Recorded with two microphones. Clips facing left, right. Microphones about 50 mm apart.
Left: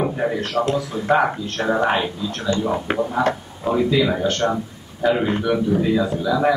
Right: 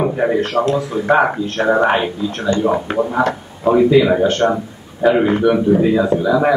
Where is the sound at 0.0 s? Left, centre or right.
Centre.